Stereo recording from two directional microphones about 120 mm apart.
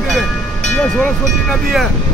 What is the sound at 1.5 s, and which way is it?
Speech, centre (ahead or behind).